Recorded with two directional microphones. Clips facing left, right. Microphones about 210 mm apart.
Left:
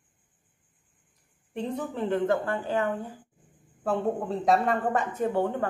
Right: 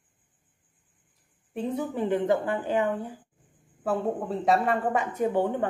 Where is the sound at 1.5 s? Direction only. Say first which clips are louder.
Right 2 dB; 5° right (ahead or behind).